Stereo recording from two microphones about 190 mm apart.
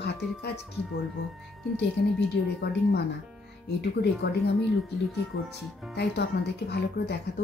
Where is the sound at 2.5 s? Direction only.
60° left (ahead or behind).